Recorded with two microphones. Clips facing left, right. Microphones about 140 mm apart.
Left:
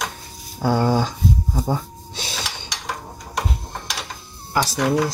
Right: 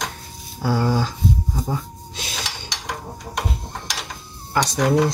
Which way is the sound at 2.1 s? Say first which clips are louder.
Left 1 dB; 30° left (ahead or behind).